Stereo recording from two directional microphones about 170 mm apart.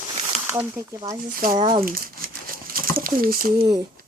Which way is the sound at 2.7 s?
60° right (ahead or behind).